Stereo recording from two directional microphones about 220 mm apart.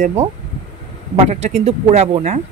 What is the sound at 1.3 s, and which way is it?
Speech, 30° right (ahead or behind).